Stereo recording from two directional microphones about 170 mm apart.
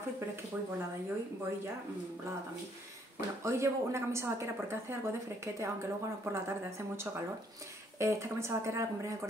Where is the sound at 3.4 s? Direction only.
15° right (ahead or behind).